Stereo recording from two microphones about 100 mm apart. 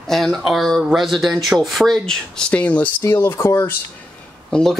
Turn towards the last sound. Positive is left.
turn(degrees=5)  # may be behind; listen again after turning